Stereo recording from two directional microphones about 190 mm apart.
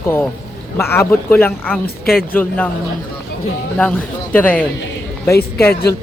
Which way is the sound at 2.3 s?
10° left (ahead or behind).